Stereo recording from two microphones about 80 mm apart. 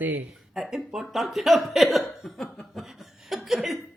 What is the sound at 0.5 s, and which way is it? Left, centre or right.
Speech, centre.